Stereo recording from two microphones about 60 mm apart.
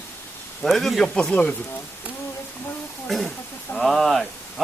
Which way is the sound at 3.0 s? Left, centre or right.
Centre.